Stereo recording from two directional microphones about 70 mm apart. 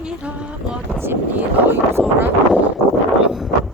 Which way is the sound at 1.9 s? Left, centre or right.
Right.